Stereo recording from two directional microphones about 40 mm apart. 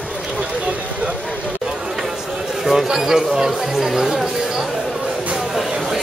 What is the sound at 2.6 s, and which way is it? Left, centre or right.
A man's voice, centre.